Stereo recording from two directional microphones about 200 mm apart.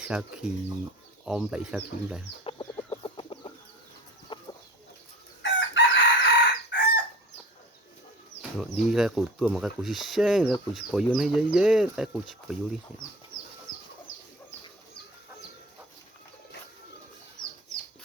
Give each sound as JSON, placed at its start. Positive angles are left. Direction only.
{"t": 0.0, "sound": "speech", "side_deg": -5}
{"t": 2.4, "sound": "chicken", "side_deg": 25}
{"t": 5.4, "sound": "chicken", "side_deg": 65}
{"t": 8.4, "sound": "speech", "side_deg": -5}